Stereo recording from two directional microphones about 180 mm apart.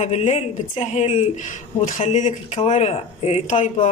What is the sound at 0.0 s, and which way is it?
Speech, 40° left (ahead or behind).